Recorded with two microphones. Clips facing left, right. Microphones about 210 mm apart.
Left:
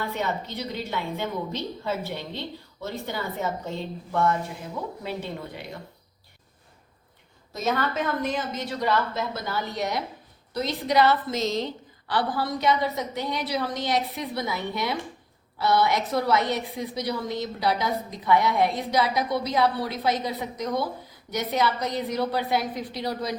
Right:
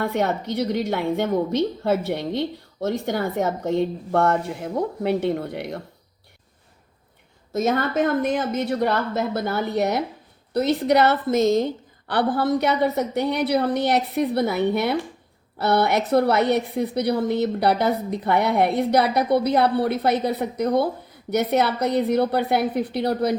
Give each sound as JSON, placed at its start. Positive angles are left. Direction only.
{"t": 0.0, "sound": "a woman's voice", "side_deg": -60}
{"t": 7.5, "sound": "a woman's voice", "side_deg": -50}